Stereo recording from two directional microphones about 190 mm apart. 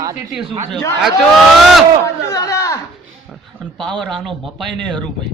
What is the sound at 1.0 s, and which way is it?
Speech, centre (ahead or behind).